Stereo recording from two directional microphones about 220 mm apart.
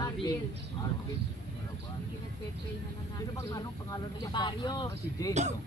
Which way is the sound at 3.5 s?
15° left (ahead or behind).